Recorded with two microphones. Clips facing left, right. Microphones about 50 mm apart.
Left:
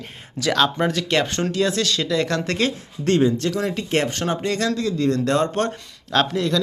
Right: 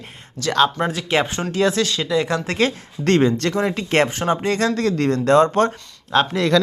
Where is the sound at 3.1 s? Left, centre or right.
Right.